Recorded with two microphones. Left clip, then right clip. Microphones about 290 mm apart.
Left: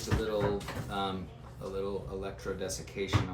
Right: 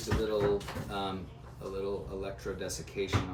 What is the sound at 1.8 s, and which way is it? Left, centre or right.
Speech, centre.